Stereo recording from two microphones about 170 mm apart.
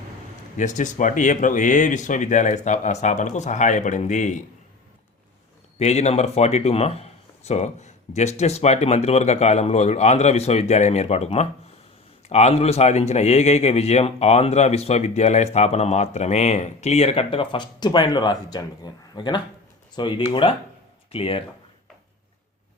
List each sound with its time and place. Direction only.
0.5 s speech: 45° left (ahead or behind)
5.8 s speech: 40° left (ahead or behind)